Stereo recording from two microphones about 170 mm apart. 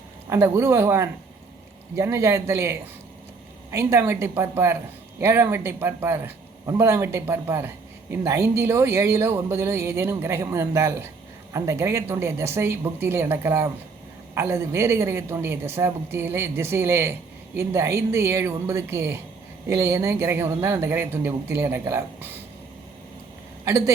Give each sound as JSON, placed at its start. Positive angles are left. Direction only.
{"t": 0.3, "sound": "speech", "side_deg": -15}
{"t": 23.6, "sound": "a woman's voice", "side_deg": -20}